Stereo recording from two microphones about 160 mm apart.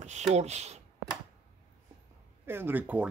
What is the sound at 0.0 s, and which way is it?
Speech, 45° right (ahead or behind).